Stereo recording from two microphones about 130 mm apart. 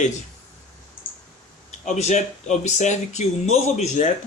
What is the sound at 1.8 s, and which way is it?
Speech, 60° left (ahead or behind).